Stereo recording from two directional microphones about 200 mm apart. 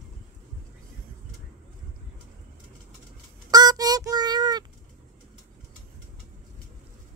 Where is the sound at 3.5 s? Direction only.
20° right (ahead or behind).